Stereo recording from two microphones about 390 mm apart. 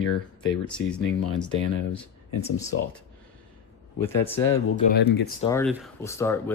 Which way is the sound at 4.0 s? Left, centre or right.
Centre.